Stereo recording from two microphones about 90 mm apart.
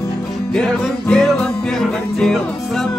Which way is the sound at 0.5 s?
10° left (ahead or behind).